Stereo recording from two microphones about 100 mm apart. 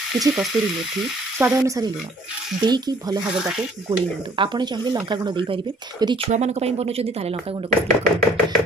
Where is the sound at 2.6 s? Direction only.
45° right (ahead or behind).